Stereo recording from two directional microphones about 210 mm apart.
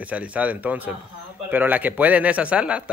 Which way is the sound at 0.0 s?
5° right (ahead or behind).